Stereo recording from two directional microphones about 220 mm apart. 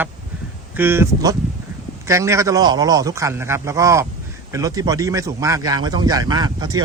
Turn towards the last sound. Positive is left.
turn(degrees=-20)  # may be behind; listen again after turning